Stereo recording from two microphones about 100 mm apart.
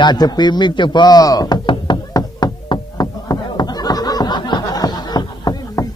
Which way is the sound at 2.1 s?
40° left (ahead or behind).